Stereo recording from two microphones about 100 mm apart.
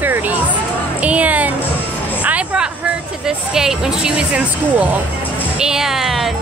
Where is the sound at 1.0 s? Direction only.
15° right (ahead or behind).